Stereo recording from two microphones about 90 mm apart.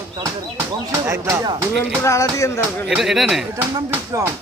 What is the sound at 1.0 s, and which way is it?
Speech, 30° right (ahead or behind).